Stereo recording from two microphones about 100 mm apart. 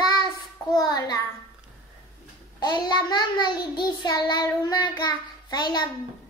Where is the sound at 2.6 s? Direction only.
45° left (ahead or behind).